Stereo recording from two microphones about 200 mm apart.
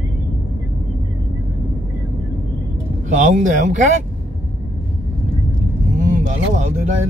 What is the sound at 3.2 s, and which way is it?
Speech, 40° right (ahead or behind).